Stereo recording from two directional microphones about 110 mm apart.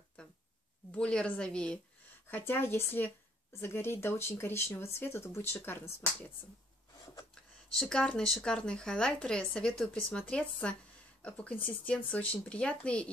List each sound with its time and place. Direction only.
0.9 s a woman's voice: 10° left (ahead or behind)
2.3 s speech: 20° left (ahead or behind)
7.9 s a woman's voice: 5° left (ahead or behind)